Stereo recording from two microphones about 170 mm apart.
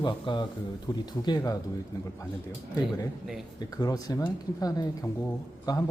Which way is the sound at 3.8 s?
20° left (ahead or behind).